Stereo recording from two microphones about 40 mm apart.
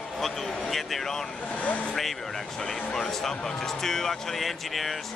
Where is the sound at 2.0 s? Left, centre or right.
Centre.